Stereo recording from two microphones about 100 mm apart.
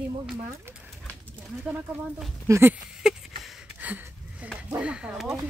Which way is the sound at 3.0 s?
5° right (ahead or behind).